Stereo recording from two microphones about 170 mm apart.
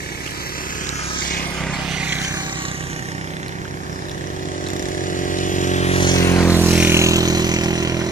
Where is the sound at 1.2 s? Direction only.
55° left (ahead or behind).